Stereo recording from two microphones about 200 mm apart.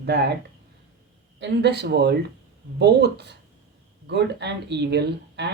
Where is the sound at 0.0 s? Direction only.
55° right (ahead or behind).